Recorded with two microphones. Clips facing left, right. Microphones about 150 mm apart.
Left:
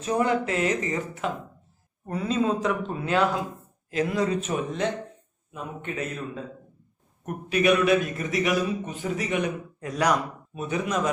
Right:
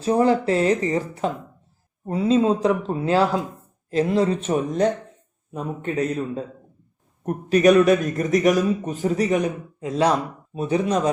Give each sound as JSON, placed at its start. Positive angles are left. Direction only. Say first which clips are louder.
{"t": 0.0, "sound": "a man's voice", "louder": "right 6 dB", "side_deg": -30}
{"t": 9.8, "sound": "a man's voice", "louder": "right 4 dB", "side_deg": -25}